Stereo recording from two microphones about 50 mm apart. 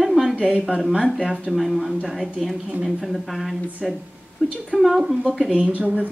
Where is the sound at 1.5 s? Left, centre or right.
Centre.